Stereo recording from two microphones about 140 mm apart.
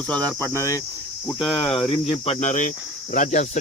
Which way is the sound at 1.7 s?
40° left (ahead or behind).